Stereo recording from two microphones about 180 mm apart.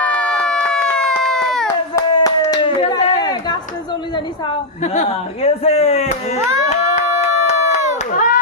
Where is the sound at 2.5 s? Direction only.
25° left (ahead or behind).